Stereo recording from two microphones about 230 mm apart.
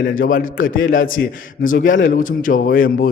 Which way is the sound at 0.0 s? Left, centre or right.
Left.